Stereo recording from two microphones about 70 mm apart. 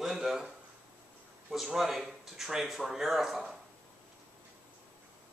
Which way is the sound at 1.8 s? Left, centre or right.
Centre.